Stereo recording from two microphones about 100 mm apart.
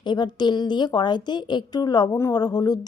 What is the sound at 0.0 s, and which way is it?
Speech, 50° left (ahead or behind).